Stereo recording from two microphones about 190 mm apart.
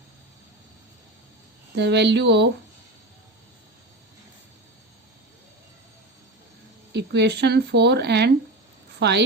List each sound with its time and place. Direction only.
1.7 s speech: 65° right (ahead or behind)
6.9 s a woman's voice: 65° right (ahead or behind)